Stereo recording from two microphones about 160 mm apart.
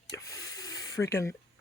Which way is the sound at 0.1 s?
20° left (ahead or behind).